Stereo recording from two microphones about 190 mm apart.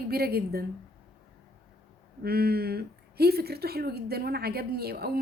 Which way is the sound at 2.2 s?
55° right (ahead or behind).